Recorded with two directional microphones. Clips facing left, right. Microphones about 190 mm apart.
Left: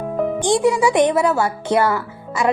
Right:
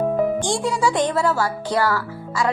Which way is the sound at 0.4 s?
20° left (ahead or behind).